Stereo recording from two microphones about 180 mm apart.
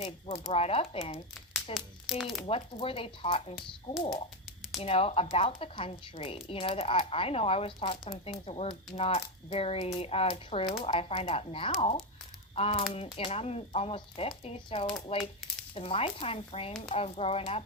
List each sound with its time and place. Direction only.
0.0 s speech: 30° left (ahead or behind)
1.7 s a child's voice: centre (ahead or behind)
2.6 s speech: 30° left (ahead or behind)
4.8 s speech: 30° left (ahead or behind)